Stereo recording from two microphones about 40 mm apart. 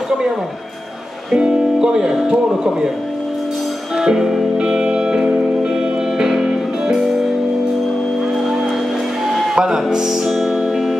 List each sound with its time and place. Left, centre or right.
1.3 s speech: centre
3.9 s music: centre
9.6 s speech: centre